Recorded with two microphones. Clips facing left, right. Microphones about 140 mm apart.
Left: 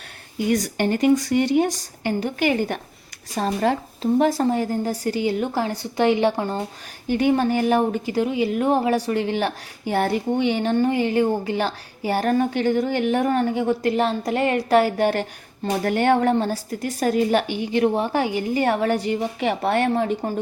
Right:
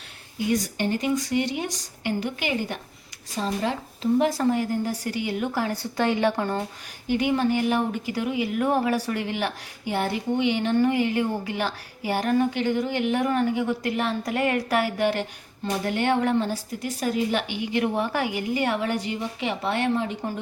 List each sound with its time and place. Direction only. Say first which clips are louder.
0.5 s a woman's voice: left 3 dB; 65° left (ahead or behind); by 4.3 s 45° left (ahead or behind)
4.3 s a woman's voice: left 2 dB; 30° left (ahead or behind)
7.1 s a woman's voice: left 3 dB; 40° left (ahead or behind)